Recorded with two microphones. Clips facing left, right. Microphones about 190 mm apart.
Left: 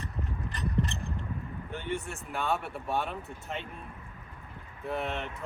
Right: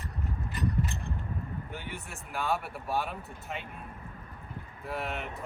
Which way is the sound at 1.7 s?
Centre (ahead or behind).